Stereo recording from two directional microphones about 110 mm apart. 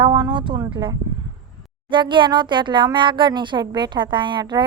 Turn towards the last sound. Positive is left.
turn(degrees=-45)  # may be behind; listen again after turning